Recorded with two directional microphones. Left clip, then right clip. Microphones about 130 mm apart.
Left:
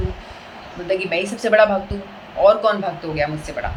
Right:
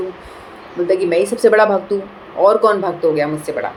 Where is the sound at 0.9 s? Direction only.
45° right (ahead or behind).